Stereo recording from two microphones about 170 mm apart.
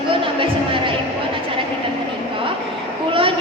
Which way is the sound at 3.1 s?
30° right (ahead or behind).